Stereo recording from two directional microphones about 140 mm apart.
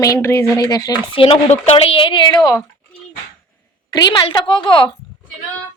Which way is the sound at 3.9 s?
30° left (ahead or behind).